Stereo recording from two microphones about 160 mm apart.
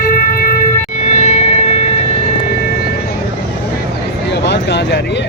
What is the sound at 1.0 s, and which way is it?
Music, 45° left (ahead or behind).